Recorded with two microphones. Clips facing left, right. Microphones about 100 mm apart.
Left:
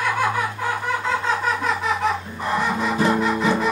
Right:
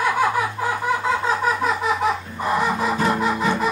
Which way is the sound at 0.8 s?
5° right (ahead or behind).